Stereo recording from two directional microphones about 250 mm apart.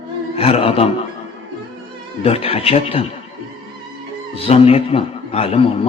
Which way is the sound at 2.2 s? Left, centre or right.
Left.